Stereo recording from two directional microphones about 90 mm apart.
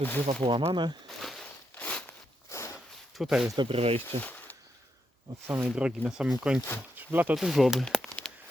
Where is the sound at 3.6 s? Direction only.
90° right.